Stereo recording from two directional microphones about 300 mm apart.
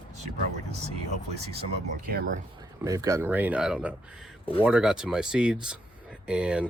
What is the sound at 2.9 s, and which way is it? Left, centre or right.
Speech, centre.